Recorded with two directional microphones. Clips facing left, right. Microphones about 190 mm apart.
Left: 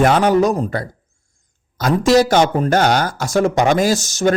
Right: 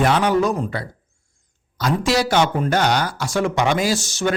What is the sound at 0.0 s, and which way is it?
Speech, 45° left (ahead or behind).